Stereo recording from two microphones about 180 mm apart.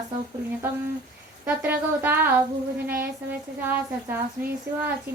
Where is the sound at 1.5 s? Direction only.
10° right (ahead or behind).